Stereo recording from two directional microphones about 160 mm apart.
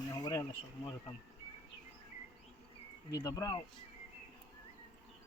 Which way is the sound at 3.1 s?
25° left (ahead or behind).